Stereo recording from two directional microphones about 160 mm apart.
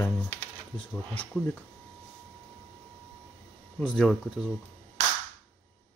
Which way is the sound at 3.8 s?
5° left (ahead or behind).